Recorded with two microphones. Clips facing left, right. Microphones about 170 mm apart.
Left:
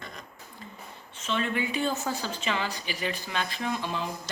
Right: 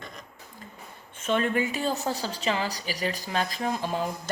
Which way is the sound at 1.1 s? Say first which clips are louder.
Right 4 dB; 50° right (ahead or behind).